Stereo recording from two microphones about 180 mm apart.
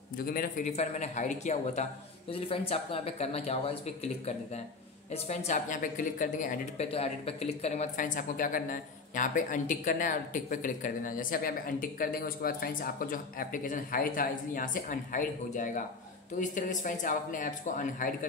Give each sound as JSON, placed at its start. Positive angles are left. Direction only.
{"t": 0.2, "sound": "a man's voice", "side_deg": 55}
{"t": 5.1, "sound": "speech", "side_deg": 40}
{"t": 6.9, "sound": "speech", "side_deg": 35}